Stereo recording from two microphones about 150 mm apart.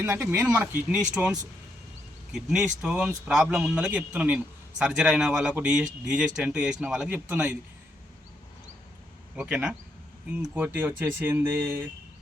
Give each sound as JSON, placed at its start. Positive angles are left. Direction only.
{"t": 0.0, "sound": "a man's voice", "side_deg": -15}
{"t": 9.3, "sound": "a man's voice", "side_deg": -5}